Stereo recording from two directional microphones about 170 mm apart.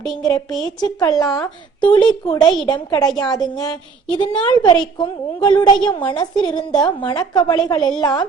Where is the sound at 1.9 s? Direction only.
25° left (ahead or behind).